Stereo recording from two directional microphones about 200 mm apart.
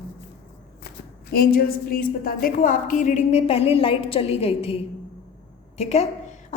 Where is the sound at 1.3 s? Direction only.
50° left (ahead or behind).